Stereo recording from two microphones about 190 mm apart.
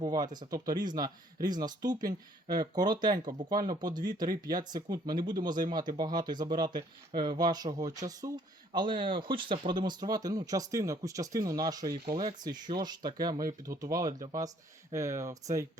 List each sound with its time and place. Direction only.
0.0 s speech: 20° right (ahead or behind)